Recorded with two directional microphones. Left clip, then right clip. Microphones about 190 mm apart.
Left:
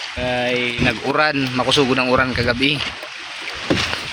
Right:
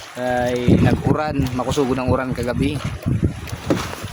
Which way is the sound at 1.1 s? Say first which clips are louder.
Left 5 dB; 5° right (ahead or behind).